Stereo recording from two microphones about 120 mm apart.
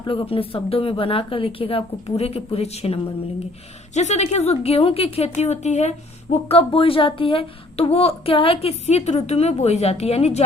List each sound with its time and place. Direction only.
0.0 s a woman's voice: 45° left (ahead or behind)
3.9 s a woman's voice: 75° left (ahead or behind)
6.5 s a woman's voice: 50° left (ahead or behind)